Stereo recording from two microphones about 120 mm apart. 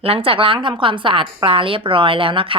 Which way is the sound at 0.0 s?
50° right (ahead or behind).